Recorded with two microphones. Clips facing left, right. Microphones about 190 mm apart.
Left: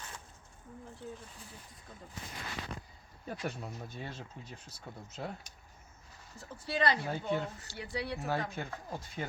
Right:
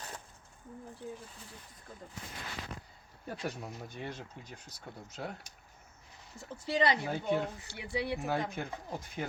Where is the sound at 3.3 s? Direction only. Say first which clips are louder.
Even; centre (ahead or behind).